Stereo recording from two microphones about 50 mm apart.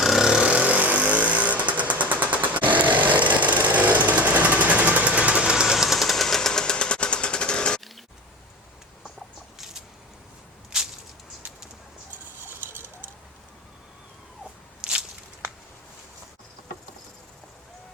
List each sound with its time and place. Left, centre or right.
0.0 s vehicle: centre
0.5 s vehicle: right
5.7 s jackhammer: centre
12.5 s bird: right
14.8 s walk: centre